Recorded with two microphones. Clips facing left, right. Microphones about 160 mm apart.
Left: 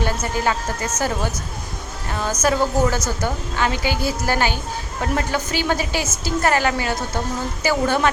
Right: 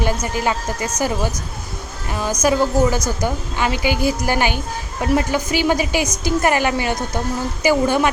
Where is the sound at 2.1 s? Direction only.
10° right (ahead or behind).